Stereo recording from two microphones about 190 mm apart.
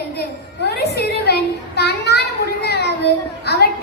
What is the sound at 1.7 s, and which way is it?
Children playing, 60° left (ahead or behind).